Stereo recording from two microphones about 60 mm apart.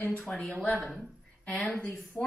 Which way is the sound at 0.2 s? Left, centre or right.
Centre.